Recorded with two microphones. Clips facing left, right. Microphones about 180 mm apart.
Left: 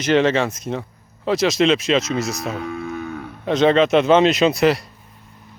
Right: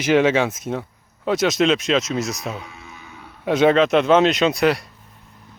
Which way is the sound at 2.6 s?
60° left (ahead or behind).